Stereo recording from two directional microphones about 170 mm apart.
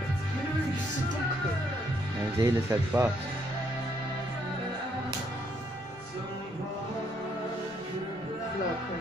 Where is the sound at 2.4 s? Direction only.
20° right (ahead or behind).